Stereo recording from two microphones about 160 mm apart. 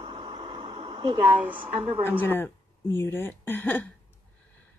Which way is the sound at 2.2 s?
15° left (ahead or behind).